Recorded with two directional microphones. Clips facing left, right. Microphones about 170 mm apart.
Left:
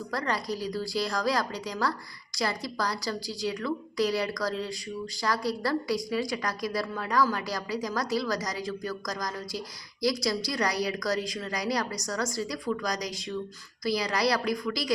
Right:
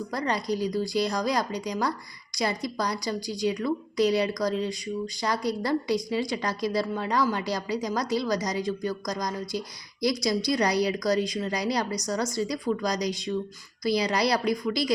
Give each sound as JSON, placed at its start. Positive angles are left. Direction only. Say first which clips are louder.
{"t": 0.1, "sound": "a woman's voice", "louder": "right 2 dB", "side_deg": -20}